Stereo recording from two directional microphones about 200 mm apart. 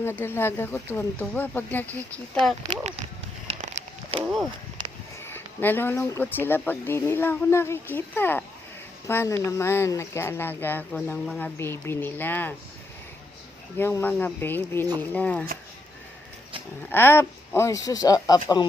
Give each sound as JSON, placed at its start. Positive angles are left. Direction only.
{"t": 0.0, "sound": "speech", "side_deg": 10}
{"t": 3.4, "sound": "a sound", "side_deg": -30}
{"t": 4.2, "sound": "a sound", "side_deg": -10}
{"t": 5.2, "sound": "speech", "side_deg": 10}
{"t": 13.7, "sound": "speech", "side_deg": 10}
{"t": 16.9, "sound": "speech", "side_deg": 10}